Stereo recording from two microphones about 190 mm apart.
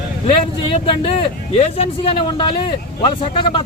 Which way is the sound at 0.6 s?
30° left (ahead or behind).